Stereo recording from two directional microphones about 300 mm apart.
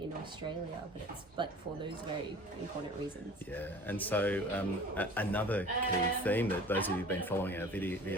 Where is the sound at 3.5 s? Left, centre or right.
Centre.